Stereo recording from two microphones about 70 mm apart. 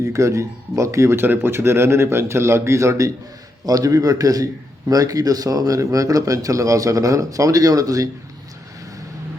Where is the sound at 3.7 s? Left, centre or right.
Right.